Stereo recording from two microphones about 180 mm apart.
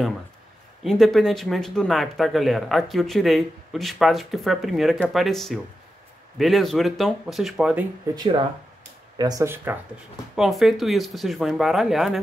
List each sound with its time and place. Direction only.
0.8 s speech: centre (ahead or behind)
8.1 s speech: 20° right (ahead or behind)
10.3 s speech: centre (ahead or behind)